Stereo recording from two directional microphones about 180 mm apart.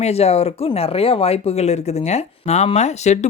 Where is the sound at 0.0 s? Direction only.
35° left (ahead or behind).